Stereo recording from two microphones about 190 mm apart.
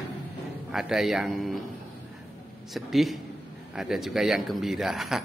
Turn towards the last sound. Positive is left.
turn(degrees=0)  # may be behind; listen again after turning